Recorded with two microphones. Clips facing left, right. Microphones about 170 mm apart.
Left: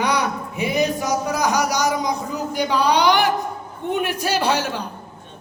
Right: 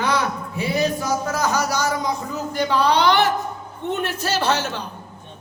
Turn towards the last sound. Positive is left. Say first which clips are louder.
# left 1 dB
turn(degrees=10)  # may be behind; listen again after turning